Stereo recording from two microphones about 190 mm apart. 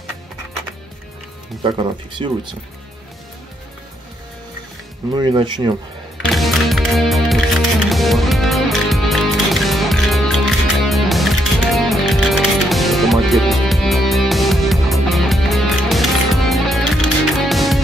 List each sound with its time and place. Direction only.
1.6 s speech: 25° right (ahead or behind)
5.1 s speech: 25° right (ahead or behind)
6.2 s music: centre (ahead or behind)